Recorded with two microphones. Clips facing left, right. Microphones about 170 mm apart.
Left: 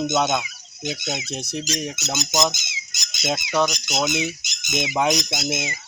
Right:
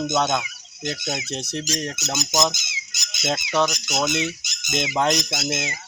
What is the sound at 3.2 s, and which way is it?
Squawk, 15° left (ahead or behind).